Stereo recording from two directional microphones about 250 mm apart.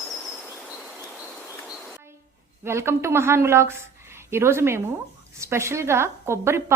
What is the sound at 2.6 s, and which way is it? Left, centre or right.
A woman's voice, centre.